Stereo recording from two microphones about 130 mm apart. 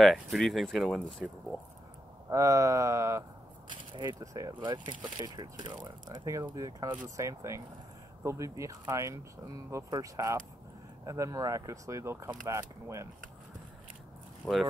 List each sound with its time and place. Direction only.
0.0 s speech: centre (ahead or behind)
2.2 s speech: 25° right (ahead or behind)
14.4 s speech: centre (ahead or behind)